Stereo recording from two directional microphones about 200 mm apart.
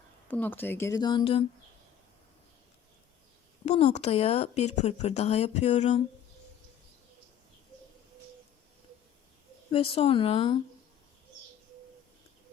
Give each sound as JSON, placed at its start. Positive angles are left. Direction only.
{"t": 0.3, "sound": "speech", "side_deg": 10}
{"t": 3.7, "sound": "speech", "side_deg": 35}
{"t": 9.7, "sound": "speech", "side_deg": 25}